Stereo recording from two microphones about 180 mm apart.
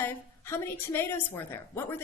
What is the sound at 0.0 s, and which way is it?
A woman's voice, 10° left (ahead or behind).